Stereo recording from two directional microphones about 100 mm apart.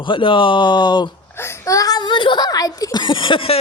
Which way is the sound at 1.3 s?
25° left (ahead or behind).